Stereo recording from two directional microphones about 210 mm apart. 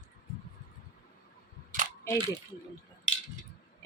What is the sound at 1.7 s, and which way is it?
Camera, 40° right (ahead or behind).